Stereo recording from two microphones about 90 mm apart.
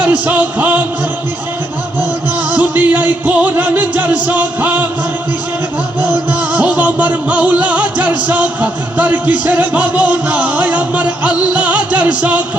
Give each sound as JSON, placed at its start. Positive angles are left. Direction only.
{"t": 0.0, "sound": "music", "side_deg": -15}
{"t": 2.5, "sound": "music", "side_deg": -20}
{"t": 6.5, "sound": "music", "side_deg": -15}